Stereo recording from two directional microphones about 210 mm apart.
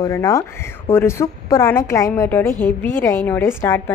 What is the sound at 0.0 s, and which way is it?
Speech, 15° left (ahead or behind).